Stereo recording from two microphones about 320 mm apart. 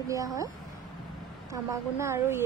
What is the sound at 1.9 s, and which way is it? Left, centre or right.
Speech, centre.